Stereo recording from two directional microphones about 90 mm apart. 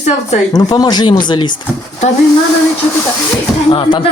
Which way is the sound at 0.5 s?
50° left (ahead or behind).